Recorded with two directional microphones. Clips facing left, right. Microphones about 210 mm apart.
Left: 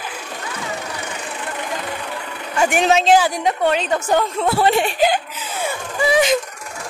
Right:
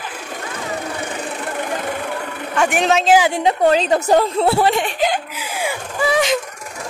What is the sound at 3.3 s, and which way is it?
A woman's voice, 30° right (ahead or behind).